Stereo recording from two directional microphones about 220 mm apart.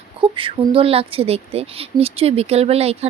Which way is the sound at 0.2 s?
25° right (ahead or behind).